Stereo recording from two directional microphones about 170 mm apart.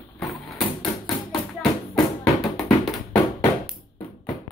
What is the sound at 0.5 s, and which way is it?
Bouncing, centre (ahead or behind).